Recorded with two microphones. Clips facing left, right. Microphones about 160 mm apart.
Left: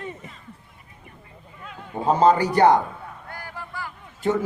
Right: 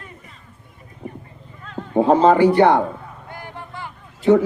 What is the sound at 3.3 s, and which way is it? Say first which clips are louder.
Vehicle: right 3 dB; 20° right (ahead or behind).